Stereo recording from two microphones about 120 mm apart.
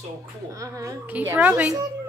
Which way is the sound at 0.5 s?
25° right (ahead or behind).